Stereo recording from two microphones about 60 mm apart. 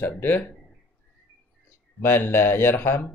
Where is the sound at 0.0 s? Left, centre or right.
Left.